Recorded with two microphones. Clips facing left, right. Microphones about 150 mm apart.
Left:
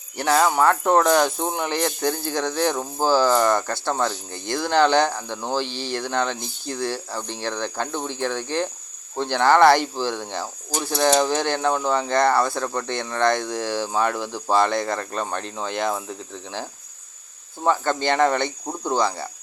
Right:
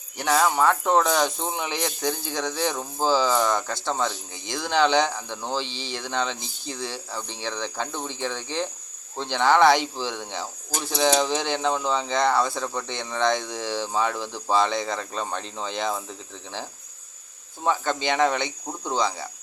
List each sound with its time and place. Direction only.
0.3 s speech: centre (ahead or behind)
4.3 s speech: 60° left (ahead or behind)
4.5 s speech: 5° left (ahead or behind)
17.6 s speech: 5° left (ahead or behind)